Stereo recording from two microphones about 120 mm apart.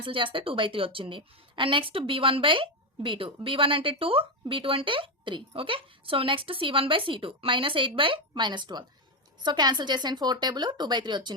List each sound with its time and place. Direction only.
0.0 s a woman's voice: 45° right (ahead or behind)